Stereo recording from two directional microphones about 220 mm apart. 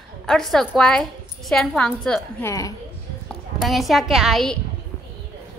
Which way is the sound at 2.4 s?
15° left (ahead or behind).